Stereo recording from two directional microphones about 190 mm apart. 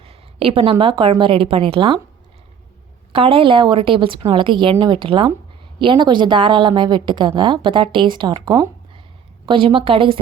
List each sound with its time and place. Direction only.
0.0 s a woman's voice: 30° right (ahead or behind)
3.1 s a woman's voice: 30° right (ahead or behind)